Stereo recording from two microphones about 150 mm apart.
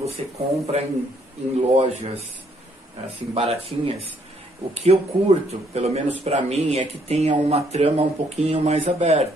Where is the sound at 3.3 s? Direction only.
40° right (ahead or behind).